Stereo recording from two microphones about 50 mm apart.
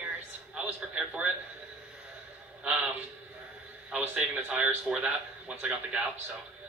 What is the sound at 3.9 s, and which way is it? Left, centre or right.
A woman's voice, right.